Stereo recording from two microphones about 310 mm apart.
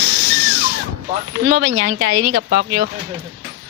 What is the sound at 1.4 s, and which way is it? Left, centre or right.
Speech, right.